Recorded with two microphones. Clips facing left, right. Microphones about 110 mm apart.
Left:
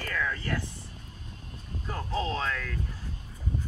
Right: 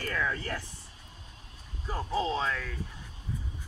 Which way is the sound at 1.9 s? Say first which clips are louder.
Right 1 dB; 10° right (ahead or behind).